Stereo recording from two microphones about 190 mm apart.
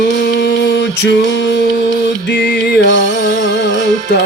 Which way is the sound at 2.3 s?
65° left (ahead or behind).